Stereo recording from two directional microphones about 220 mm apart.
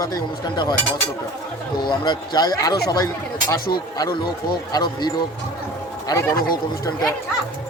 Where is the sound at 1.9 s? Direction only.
20° left (ahead or behind).